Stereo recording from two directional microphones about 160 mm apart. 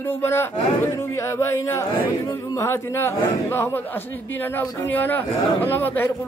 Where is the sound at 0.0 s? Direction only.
15° left (ahead or behind).